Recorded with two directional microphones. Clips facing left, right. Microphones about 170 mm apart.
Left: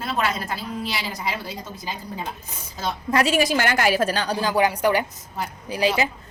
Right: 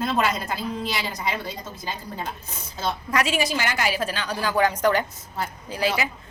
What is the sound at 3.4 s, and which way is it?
Speech, 50° left (ahead or behind).